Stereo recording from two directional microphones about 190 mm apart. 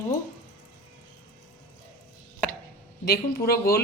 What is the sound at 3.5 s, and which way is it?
Speech, 50° left (ahead or behind).